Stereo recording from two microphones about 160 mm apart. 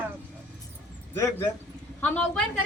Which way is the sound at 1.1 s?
15° left (ahead or behind).